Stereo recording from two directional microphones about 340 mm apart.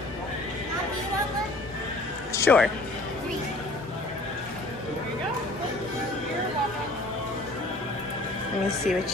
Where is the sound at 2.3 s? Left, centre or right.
Centre.